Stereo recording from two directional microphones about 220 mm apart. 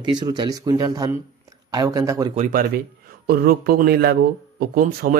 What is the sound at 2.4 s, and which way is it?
Speech, 40° right (ahead or behind).